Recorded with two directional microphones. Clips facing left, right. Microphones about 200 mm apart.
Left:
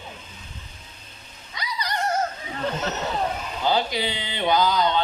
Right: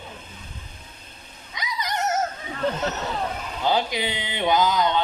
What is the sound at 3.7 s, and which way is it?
A man's voice, 15° right (ahead or behind).